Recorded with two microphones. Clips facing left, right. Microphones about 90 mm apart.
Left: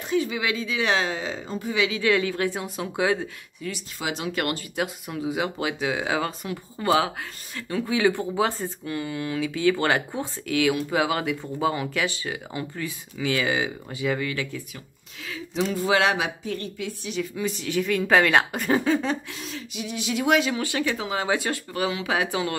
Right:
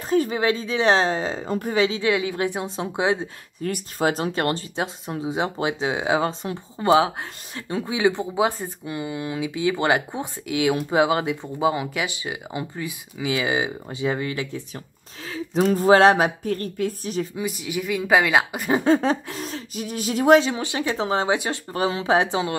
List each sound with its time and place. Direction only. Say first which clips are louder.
0.1 s speech: right 4 dB; 40° right (ahead or behind)
1.9 s speech: even; 20° right (ahead or behind)
3.6 s speech: right 8 dB; 45° right (ahead or behind)
4.3 s speech: right 3 dB; 30° right (ahead or behind)
15.2 s speech: right 6 dB; 40° right (ahead or behind)
17.4 s a woman's voice: left 1 dB; 10° right (ahead or behind)
18.8 s speech: right 4 dB; 35° right (ahead or behind)